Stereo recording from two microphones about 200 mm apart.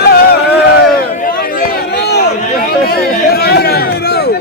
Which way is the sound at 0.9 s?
45° left (ahead or behind).